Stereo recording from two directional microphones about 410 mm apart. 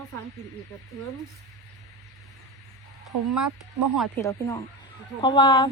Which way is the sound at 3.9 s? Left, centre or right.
Centre.